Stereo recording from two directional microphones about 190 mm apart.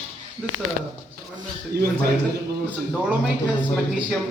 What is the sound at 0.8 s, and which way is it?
Speech, 45° right (ahead or behind).